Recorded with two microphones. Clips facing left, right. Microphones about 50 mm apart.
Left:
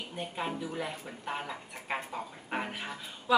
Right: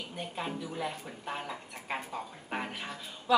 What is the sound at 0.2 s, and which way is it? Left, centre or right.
A woman's voice, centre.